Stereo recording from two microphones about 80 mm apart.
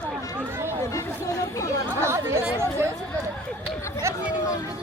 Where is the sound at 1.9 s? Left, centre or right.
Right.